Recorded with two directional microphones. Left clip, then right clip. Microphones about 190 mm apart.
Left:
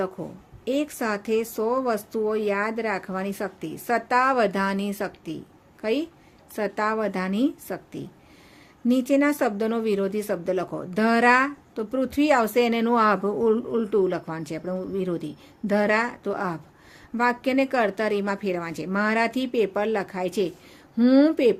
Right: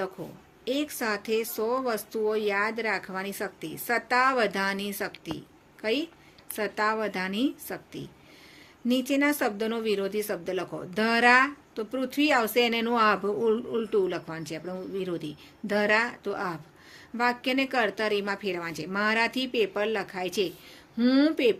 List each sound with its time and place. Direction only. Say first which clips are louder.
0.6 s speech: left 3 dB; 50° left (ahead or behind)